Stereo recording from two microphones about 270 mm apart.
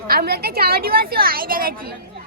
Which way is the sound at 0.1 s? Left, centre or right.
Right.